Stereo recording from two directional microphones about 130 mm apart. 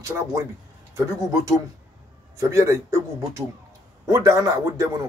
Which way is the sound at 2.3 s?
25° right (ahead or behind).